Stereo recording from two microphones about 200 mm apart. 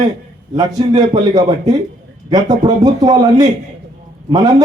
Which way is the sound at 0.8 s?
25° right (ahead or behind).